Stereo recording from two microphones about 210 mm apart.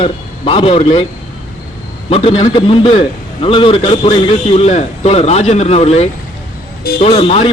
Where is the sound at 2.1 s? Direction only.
30° left (ahead or behind).